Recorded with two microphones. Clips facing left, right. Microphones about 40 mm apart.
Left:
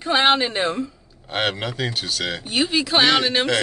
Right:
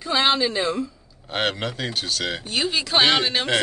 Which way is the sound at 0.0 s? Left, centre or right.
Left.